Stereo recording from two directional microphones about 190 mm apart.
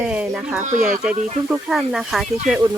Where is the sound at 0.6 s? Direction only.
45° right (ahead or behind).